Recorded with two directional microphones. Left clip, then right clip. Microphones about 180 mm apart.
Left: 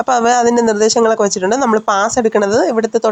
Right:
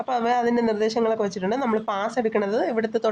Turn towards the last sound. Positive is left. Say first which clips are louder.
# left 9 dB
turn(degrees=20)  # may be behind; listen again after turning